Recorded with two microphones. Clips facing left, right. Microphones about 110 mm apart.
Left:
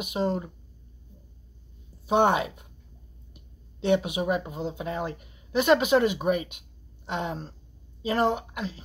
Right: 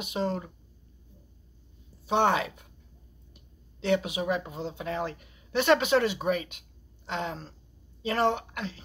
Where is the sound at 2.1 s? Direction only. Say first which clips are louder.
Left 3 dB; 15° left (ahead or behind).